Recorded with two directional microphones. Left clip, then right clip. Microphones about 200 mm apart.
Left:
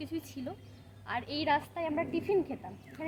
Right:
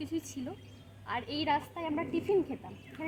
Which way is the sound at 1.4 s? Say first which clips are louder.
Left 2 dB; 5° left (ahead or behind).